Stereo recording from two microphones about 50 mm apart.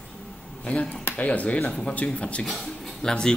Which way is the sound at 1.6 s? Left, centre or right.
Centre.